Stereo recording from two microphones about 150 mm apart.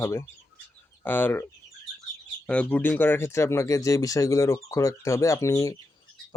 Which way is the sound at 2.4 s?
10° left (ahead or behind).